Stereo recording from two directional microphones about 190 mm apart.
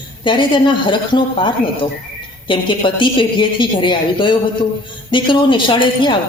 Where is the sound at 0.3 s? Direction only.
25° left (ahead or behind).